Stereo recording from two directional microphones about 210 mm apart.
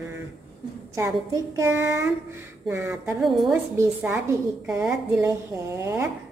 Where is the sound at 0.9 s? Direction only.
15° right (ahead or behind).